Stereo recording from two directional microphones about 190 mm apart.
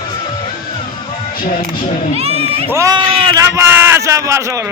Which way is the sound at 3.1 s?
30° right (ahead or behind).